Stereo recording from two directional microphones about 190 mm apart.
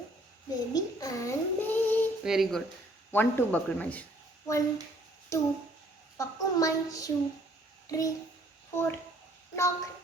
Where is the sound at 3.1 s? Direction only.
10° left (ahead or behind).